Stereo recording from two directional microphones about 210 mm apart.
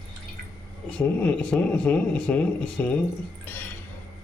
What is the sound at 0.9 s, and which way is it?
Speech, 5° left (ahead or behind).